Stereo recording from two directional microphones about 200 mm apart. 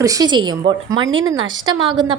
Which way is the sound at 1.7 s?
20° right (ahead or behind).